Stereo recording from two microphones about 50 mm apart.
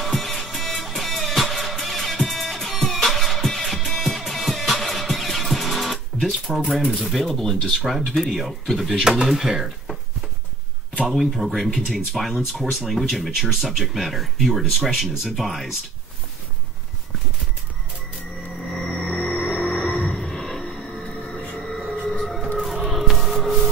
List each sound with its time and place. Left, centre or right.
0.0 s music: centre
6.9 s speech: centre
8.9 s speech: centre
11.0 s speech: centre
19.0 s music: centre
19.7 s music: centre
20.8 s music: left
21.5 s music: centre
22.6 s music: centre